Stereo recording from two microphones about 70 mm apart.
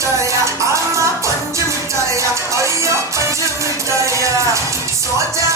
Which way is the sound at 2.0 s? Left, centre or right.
Right.